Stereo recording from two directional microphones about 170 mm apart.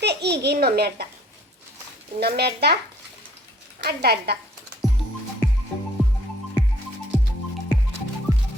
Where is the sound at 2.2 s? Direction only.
70° right (ahead or behind).